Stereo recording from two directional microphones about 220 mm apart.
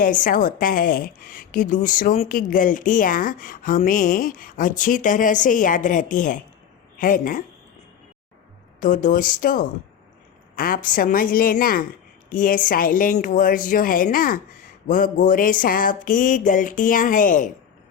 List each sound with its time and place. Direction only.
0.0 s a woman's voice: 40° left (ahead or behind)
8.8 s a woman's voice: 35° left (ahead or behind)